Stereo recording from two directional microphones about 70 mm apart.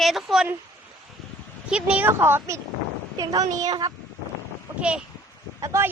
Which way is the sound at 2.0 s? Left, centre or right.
Right.